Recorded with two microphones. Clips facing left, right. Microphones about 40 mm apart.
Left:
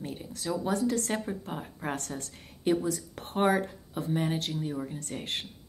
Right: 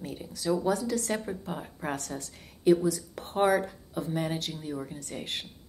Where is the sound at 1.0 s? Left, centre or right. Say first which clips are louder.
Even; centre.